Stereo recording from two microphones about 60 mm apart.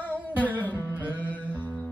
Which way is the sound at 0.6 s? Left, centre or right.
Left.